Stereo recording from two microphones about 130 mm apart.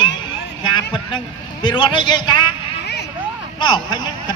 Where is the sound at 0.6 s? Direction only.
35° left (ahead or behind).